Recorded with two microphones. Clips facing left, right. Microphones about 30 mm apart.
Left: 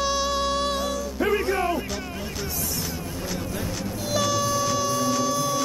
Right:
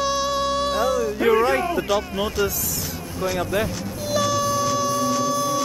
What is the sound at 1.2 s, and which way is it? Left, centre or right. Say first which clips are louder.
Speech: right 5 dB; right.